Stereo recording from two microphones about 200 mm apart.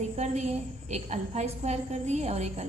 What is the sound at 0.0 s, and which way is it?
A woman's voice, 35° right (ahead or behind).